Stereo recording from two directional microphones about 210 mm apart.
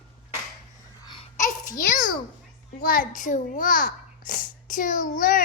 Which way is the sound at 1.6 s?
40° left (ahead or behind).